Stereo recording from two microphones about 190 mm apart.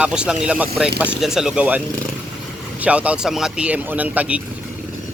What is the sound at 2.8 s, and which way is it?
Speech, 5° right (ahead or behind).